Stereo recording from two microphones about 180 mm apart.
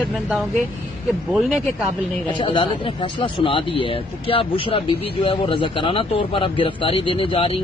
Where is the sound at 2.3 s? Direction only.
30° left (ahead or behind).